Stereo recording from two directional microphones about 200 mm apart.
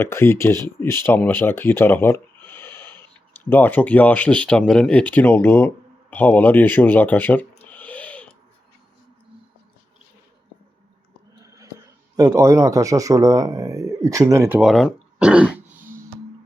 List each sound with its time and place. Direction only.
0.0 s speech: 10° left (ahead or behind)
7.6 s owl: 10° left (ahead or behind)
11.4 s a sound: 15° right (ahead or behind)
12.1 s speech: 15° right (ahead or behind)